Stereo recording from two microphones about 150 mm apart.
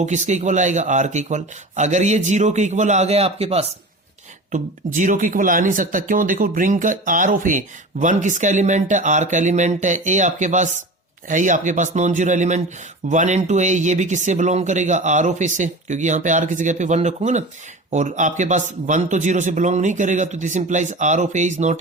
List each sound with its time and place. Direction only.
0.0 s speech: 50° right (ahead or behind)
4.9 s speech: 60° right (ahead or behind)